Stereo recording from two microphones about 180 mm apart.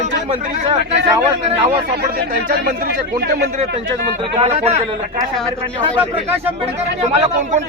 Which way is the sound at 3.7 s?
30° right (ahead or behind).